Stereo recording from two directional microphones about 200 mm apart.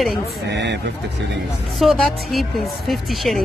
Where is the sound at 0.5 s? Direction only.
60° right (ahead or behind).